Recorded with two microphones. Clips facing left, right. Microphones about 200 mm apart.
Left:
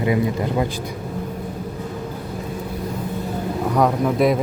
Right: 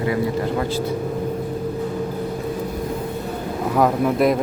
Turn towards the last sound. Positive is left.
turn(degrees=0)  # may be behind; listen again after turning